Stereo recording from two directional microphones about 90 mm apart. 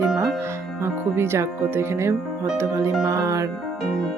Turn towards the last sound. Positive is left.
turn(degrees=-35)  # may be behind; listen again after turning